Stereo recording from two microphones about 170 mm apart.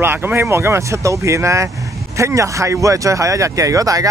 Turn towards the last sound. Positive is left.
turn(degrees=-20)  # may be behind; listen again after turning